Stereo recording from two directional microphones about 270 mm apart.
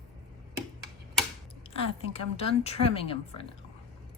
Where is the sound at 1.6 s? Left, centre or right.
Left.